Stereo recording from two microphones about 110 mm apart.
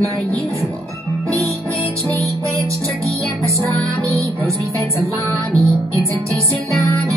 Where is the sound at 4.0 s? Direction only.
30° right (ahead or behind).